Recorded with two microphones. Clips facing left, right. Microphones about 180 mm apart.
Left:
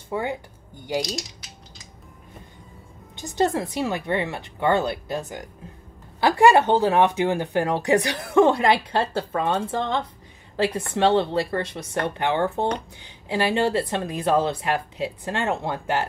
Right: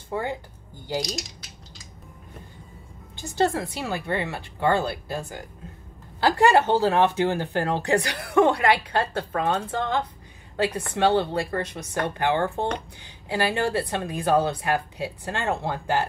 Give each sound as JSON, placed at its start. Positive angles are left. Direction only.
{"t": 0.1, "sound": "speech", "side_deg": 15}
{"t": 3.2, "sound": "speech", "side_deg": 20}